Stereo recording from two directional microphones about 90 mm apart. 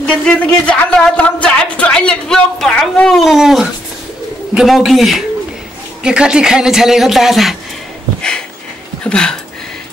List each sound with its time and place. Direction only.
0.2 s speech: 10° left (ahead or behind); by 7.5 s 5° right (ahead or behind)
9.0 s speech: 10° left (ahead or behind)